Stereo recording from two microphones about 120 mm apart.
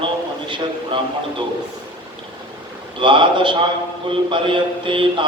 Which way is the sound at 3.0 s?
45° right (ahead or behind).